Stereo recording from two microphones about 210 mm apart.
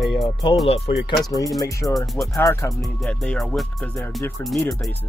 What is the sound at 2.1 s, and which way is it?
Speech, centre (ahead or behind).